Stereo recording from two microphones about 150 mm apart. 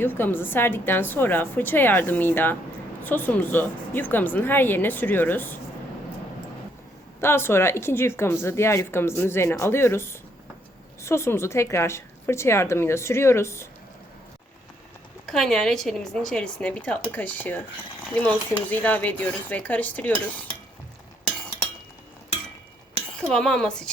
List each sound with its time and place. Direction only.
0.0 s speech: 15° left (ahead or behind)
7.2 s speech: 15° left (ahead or behind)
15.3 s speech: 5° left (ahead or behind)
23.2 s speech: 5° left (ahead or behind)